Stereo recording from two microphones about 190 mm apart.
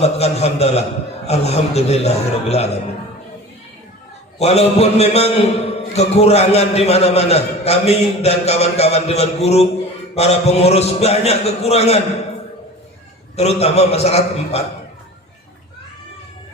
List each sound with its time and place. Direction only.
0.0 s a man's voice: 35° left (ahead or behind)
4.4 s a man's voice: 35° left (ahead or behind)
13.3 s a man's voice: 35° left (ahead or behind)